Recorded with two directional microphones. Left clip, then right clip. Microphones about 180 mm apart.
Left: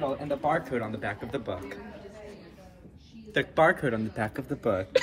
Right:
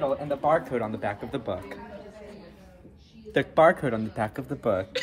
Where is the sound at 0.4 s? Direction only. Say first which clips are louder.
Right 5 dB; 35° right (ahead or behind); by 1.8 s 55° right (ahead or behind).